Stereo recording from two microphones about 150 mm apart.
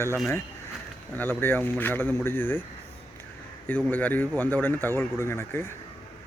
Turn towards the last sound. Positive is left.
turn(degrees=15)  # may be behind; listen again after turning